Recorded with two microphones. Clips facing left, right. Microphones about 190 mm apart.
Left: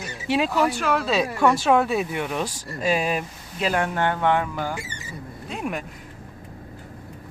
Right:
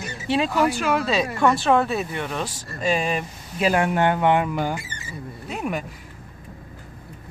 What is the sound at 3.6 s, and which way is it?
Speech, 10° right (ahead or behind).